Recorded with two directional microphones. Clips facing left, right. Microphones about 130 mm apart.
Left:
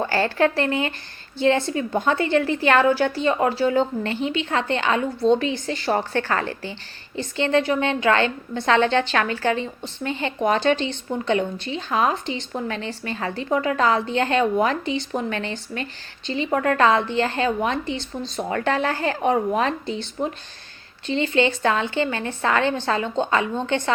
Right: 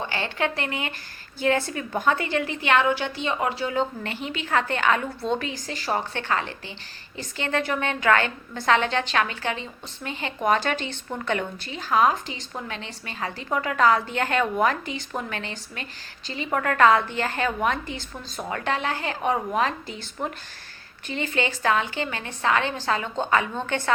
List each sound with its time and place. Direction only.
0.1 s a woman's voice: 40° left (ahead or behind)
7.2 s a woman's voice: 25° left (ahead or behind)
18.5 s a woman's voice: 40° left (ahead or behind)
21.1 s a woman's voice: 25° left (ahead or behind)